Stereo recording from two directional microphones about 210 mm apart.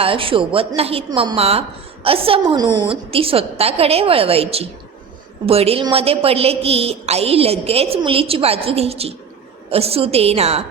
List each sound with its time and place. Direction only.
0.0 s a woman's voice: 25° right (ahead or behind)